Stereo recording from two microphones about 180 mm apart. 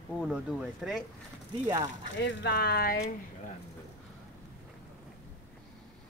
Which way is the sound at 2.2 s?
75° left (ahead or behind).